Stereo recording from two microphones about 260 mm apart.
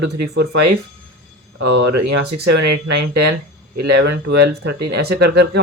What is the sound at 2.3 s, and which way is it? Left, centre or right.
Speech, right.